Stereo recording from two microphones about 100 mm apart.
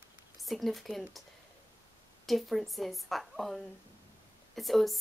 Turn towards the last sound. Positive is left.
turn(degrees=0)  # may be behind; listen again after turning